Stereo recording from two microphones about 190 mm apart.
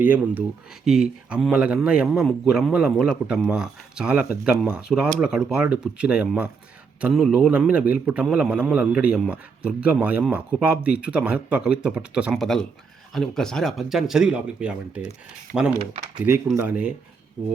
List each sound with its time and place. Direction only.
0.0 s a man's voice: 10° right (ahead or behind)
15.5 s speech: 50° right (ahead or behind)
16.6 s speech: 5° right (ahead or behind)